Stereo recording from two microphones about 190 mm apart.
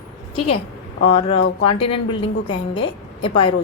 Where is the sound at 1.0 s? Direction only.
30° left (ahead or behind).